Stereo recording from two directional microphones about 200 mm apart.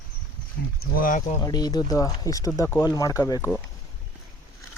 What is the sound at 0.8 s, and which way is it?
Speech, 45° left (ahead or behind).